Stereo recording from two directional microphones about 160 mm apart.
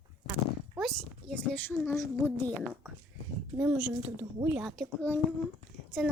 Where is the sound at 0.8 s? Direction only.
5° left (ahead or behind).